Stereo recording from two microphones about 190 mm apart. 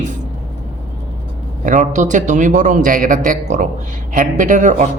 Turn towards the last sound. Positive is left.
turn(degrees=-40)  # may be behind; listen again after turning